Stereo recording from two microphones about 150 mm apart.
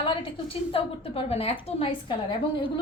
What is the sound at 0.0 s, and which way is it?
A woman's voice, 35° left (ahead or behind).